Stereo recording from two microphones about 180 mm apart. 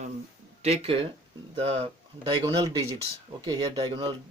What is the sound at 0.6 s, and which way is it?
Speech, 35° right (ahead or behind).